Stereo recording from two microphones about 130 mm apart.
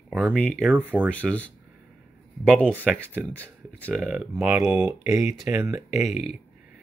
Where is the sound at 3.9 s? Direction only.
5° right (ahead or behind); by 5.8 s 20° right (ahead or behind).